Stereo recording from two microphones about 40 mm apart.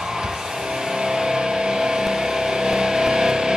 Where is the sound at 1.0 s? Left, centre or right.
Centre.